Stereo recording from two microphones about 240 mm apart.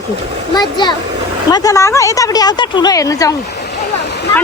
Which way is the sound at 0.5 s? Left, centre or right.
Centre.